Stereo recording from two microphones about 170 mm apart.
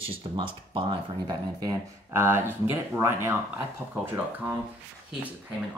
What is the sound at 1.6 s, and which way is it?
Speech, 20° right (ahead or behind).